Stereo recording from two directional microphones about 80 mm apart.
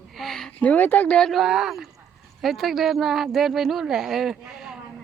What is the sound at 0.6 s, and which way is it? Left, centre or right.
Speech, left.